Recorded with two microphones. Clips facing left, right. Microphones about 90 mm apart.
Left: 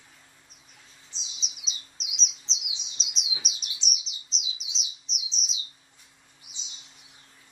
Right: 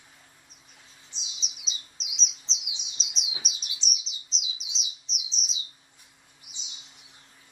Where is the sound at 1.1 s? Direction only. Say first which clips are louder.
Right 1 dB; 60° right (ahead or behind).